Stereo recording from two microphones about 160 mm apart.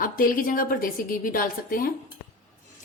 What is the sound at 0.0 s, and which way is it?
A woman's voice, 60° left (ahead or behind).